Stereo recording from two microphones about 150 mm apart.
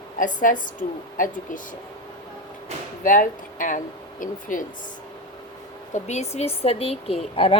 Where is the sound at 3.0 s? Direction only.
60° left (ahead or behind).